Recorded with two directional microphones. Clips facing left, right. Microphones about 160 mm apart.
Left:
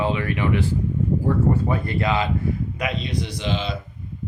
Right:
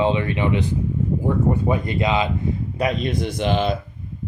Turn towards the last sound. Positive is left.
turn(degrees=-55)  # may be behind; listen again after turning